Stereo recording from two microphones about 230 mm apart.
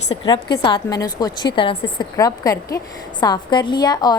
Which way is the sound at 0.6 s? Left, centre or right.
Centre.